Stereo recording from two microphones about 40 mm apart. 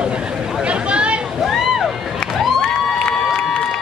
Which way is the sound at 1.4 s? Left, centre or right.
Centre.